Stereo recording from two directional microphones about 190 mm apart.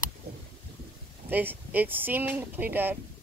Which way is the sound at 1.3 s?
10° right (ahead or behind).